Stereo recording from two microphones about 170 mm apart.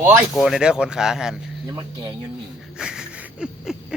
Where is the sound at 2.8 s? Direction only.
5° right (ahead or behind).